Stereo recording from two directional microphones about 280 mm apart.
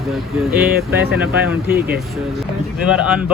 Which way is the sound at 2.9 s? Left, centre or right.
Centre.